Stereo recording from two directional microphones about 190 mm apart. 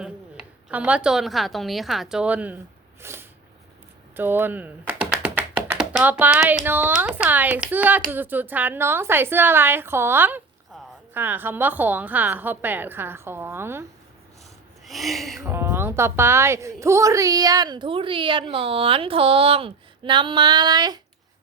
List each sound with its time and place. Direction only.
0.0 s a woman's voice: 5° right (ahead or behind)
3.0 s a sound: 10° right (ahead or behind)
4.2 s speech: 10° right (ahead or behind)
14.8 s speech: centre (ahead or behind)
15.4 s a woman's voice: 15° right (ahead or behind)